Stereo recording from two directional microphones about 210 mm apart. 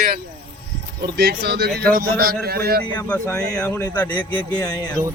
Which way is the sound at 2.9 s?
10° left (ahead or behind).